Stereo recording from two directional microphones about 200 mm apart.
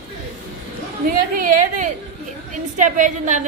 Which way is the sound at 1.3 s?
40° right (ahead or behind).